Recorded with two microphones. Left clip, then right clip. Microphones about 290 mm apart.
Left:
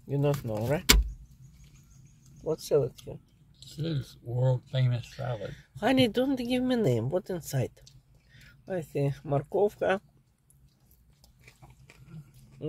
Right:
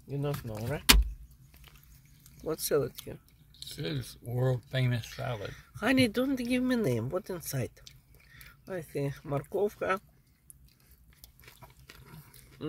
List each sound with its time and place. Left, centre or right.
0.1 s speech: centre
2.4 s speech: centre
3.5 s speech: right
5.5 s speech: centre